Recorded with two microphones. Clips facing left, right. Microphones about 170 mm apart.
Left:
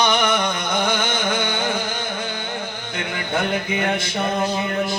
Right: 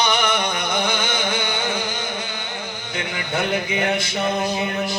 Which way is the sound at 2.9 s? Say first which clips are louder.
Left 1 dB; 50° left (ahead or behind).